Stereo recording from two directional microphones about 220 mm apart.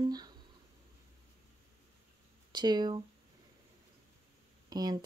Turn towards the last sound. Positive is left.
turn(degrees=-20)  # may be behind; listen again after turning